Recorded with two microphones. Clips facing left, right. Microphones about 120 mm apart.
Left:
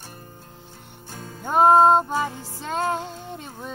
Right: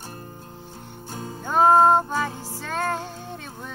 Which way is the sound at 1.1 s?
30° right (ahead or behind).